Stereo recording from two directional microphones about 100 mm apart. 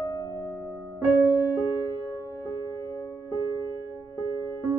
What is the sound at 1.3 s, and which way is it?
Music, 20° right (ahead or behind).